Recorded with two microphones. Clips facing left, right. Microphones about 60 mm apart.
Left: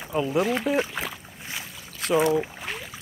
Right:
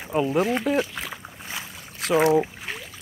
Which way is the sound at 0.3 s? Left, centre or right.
Centre.